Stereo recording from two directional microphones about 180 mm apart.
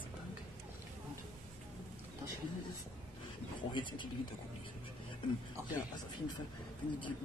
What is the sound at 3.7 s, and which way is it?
Speech, 25° left (ahead or behind).